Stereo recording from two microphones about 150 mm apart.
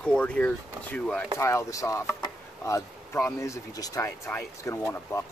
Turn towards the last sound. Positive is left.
turn(degrees=15)  # may be behind; listen again after turning